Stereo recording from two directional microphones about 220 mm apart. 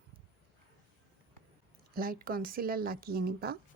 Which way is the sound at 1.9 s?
40° right (ahead or behind).